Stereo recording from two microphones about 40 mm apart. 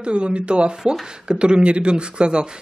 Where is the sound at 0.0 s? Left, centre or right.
Right.